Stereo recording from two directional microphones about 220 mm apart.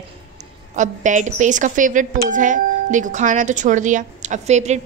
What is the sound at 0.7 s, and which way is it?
Speech, 35° right (ahead or behind).